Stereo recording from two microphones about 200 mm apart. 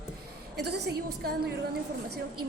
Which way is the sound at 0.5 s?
55° right (ahead or behind).